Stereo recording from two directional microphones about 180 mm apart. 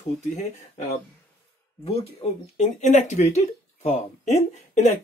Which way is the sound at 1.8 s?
35° left (ahead or behind).